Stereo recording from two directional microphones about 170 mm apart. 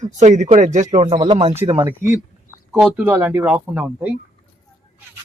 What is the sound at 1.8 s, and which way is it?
Speech, 15° right (ahead or behind).